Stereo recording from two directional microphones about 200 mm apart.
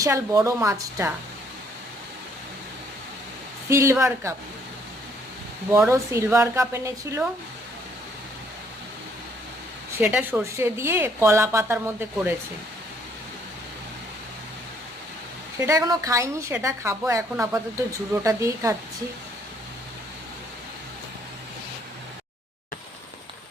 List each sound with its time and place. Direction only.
0.0 s a woman's voice: 15° right (ahead or behind)
3.7 s a woman's voice: 15° right (ahead or behind)
5.9 s a woman's voice: 15° right (ahead or behind)
10.0 s a woman's voice: 10° right (ahead or behind)
15.6 s a woman's voice: 15° right (ahead or behind)